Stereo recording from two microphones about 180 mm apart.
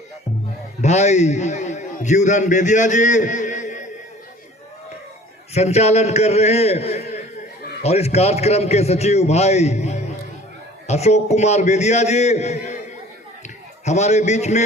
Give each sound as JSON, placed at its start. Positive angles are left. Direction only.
{"t": 0.8, "sound": "a man's voice", "side_deg": 40}
{"t": 5.5, "sound": "a man's voice", "side_deg": 35}
{"t": 13.8, "sound": "a man's voice", "side_deg": 40}